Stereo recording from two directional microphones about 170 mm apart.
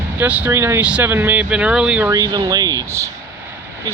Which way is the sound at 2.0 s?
25° right (ahead or behind).